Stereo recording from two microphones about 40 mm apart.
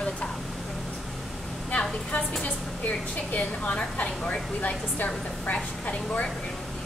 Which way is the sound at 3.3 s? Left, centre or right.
Left.